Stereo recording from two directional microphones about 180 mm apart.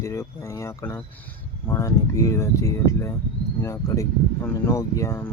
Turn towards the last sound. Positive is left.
turn(degrees=15)  # may be behind; listen again after turning